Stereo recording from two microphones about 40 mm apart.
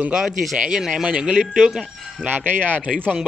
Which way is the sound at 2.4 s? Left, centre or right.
Right.